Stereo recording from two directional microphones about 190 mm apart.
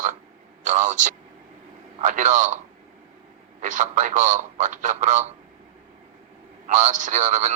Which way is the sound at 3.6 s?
40° right (ahead or behind).